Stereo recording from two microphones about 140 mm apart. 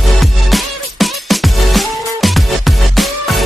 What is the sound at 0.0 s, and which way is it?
Music, centre (ahead or behind).